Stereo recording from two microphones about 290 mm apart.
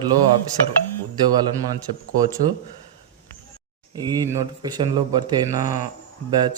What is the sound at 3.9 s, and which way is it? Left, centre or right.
A man's voice, centre.